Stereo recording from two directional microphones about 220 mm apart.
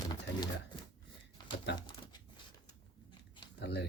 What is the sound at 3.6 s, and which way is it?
Speech, 50° left (ahead or behind).